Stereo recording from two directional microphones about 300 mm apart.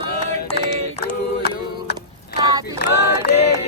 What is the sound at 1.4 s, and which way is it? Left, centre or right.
A capella, left.